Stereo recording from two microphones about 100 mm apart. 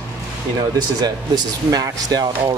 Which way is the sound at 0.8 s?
40° right (ahead or behind).